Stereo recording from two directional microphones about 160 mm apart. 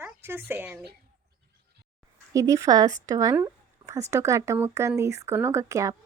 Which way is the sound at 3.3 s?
20° right (ahead or behind).